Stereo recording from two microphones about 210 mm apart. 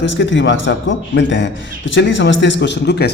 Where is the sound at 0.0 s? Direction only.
60° left (ahead or behind).